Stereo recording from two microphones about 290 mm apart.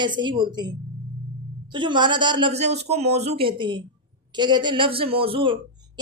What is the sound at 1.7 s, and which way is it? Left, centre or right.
Speech, centre.